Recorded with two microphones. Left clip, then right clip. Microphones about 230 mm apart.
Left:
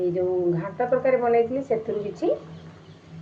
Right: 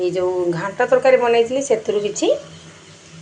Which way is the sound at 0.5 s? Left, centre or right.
Centre.